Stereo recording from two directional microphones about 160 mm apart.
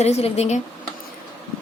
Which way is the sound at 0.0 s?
40° left (ahead or behind).